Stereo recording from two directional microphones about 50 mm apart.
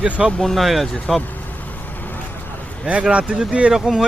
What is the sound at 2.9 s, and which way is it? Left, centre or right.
Speech, right.